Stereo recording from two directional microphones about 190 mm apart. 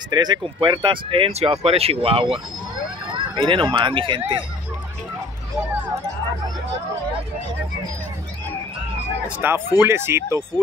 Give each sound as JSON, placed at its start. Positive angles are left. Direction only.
{"t": 0.1, "sound": "speech", "side_deg": -20}
{"t": 9.4, "sound": "speech", "side_deg": -10}